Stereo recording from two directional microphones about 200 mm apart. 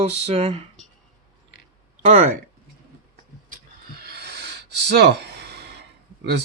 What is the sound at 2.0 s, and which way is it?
Speech, 35° right (ahead or behind).